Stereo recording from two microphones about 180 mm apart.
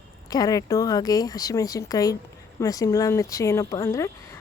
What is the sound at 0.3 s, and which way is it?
Speech, 20° left (ahead or behind).